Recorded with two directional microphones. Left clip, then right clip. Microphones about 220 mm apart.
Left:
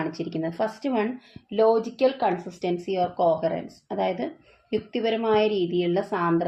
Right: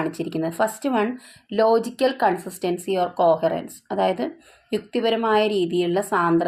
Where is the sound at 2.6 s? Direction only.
20° right (ahead or behind).